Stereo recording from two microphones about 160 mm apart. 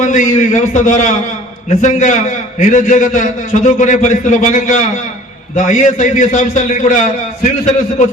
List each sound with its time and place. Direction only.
0.0 s a man's voice: 55° left (ahead or behind)